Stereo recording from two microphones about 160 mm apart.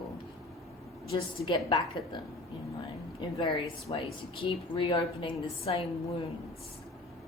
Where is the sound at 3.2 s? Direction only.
30° left (ahead or behind).